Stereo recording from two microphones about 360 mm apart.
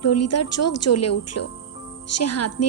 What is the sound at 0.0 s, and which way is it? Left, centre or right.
A woman's voice, left.